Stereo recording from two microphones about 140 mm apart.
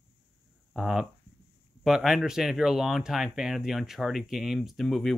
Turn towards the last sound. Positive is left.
turn(degrees=0)  # may be behind; listen again after turning